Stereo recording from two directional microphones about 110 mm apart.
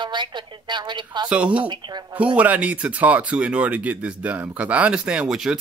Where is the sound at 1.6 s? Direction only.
45° right (ahead or behind).